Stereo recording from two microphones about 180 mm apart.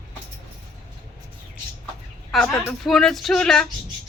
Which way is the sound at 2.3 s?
Centre (ahead or behind).